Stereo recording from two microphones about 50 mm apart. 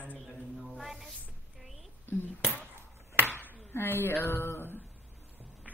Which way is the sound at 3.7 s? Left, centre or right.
Left.